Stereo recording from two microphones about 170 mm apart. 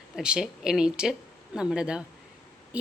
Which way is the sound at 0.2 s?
5° right (ahead or behind).